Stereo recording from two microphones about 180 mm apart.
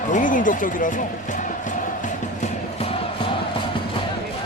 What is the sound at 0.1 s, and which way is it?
Speech, 45° left (ahead or behind).